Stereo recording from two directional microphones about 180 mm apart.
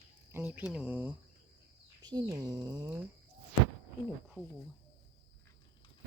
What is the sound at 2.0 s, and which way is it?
Speech, 20° right (ahead or behind).